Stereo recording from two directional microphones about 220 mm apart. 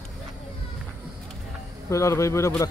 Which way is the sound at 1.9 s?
15° left (ahead or behind).